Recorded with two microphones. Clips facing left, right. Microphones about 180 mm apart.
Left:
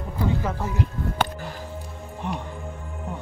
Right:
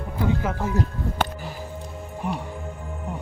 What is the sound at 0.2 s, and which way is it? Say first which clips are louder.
Speech: right 1 dB; 5° right (ahead or behind).